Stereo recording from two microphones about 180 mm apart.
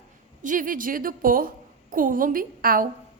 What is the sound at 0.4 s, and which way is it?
A woman's voice, 50° right (ahead or behind).